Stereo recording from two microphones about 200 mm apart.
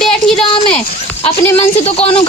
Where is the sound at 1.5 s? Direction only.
30° left (ahead or behind).